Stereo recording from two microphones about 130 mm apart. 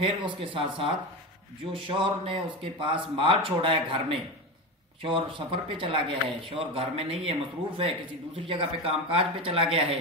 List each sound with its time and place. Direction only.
0.0 s a man's voice: 40° right (ahead or behind)
5.0 s a man's voice: 40° right (ahead or behind)